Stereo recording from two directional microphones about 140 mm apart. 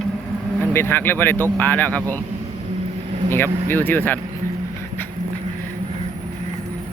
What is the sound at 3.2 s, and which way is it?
Speech, 15° left (ahead or behind).